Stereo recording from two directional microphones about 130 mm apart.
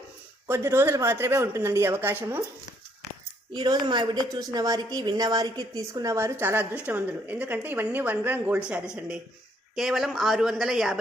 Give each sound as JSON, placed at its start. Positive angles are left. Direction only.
{"t": 0.4, "sound": "speech", "side_deg": -20}
{"t": 3.5, "sound": "a woman's voice", "side_deg": -35}